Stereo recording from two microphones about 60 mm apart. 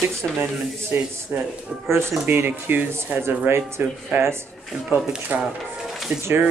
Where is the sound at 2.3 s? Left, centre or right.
Right.